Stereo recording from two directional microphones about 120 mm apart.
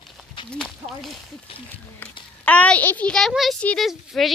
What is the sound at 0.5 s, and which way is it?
Speech, 5° left (ahead or behind).